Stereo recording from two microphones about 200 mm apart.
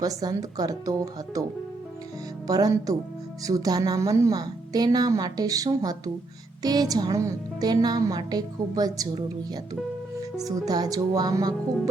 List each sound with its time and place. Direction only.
0.0 s a woman's voice: 20° right (ahead or behind)
2.5 s a woman's voice: 20° right (ahead or behind)
10.4 s a woman's voice: 20° right (ahead or behind)